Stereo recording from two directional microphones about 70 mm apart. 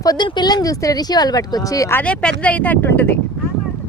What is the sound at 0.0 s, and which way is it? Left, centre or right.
Speech, left.